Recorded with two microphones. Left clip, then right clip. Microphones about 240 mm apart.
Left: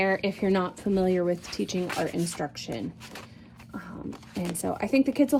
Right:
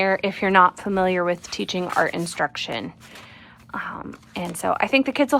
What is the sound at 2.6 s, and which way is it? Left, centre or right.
Speech, right.